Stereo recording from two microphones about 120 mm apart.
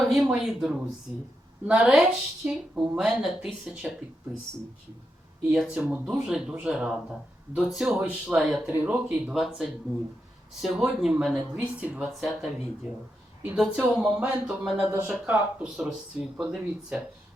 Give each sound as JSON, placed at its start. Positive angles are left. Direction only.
{"t": 0.0, "sound": "a woman's voice", "side_deg": 0}
{"t": 5.4, "sound": "a woman's voice", "side_deg": -5}
{"t": 13.6, "sound": "a woman's voice", "side_deg": -5}
{"t": 14.8, "sound": "a woman's voice", "side_deg": -20}